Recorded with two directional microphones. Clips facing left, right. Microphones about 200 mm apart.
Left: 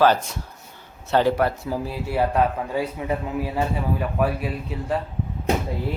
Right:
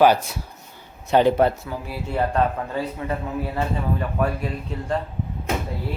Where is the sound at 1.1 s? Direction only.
20° right (ahead or behind).